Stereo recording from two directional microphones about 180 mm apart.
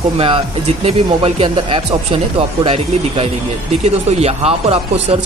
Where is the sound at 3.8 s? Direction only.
35° right (ahead or behind).